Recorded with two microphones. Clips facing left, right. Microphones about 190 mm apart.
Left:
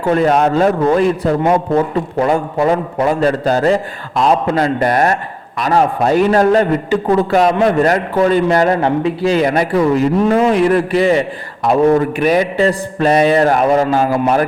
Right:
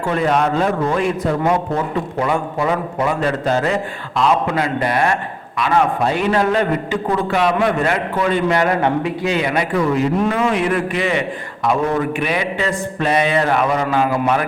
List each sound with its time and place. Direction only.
0.1 s a man's voice: 40° left (ahead or behind)
12.2 s a man's voice: 40° left (ahead or behind)